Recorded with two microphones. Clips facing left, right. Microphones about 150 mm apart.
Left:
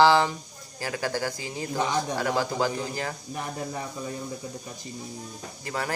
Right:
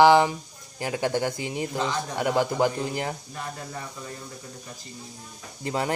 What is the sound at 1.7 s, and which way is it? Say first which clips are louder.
Speech: left 4 dB; 15° left (ahead or behind).